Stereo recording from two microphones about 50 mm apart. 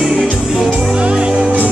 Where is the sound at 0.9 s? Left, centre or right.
Right.